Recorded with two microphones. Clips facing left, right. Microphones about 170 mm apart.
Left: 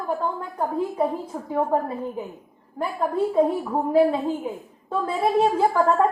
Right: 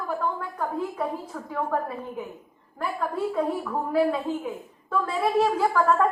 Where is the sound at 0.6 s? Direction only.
25° left (ahead or behind).